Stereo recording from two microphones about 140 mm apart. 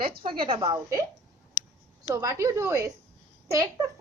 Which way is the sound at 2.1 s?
25° right (ahead or behind).